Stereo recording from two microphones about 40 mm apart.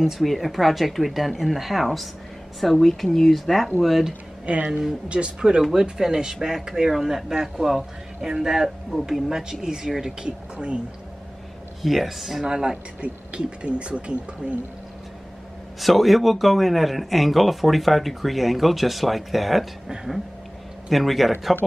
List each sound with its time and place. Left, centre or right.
0.2 s speech: centre
4.5 s speech: right
5.8 s speech: centre
9.8 s speech: centre
10.2 s speech: right
11.8 s speech: centre
12.4 s speech: centre
15.8 s speech: centre
20.9 s speech: centre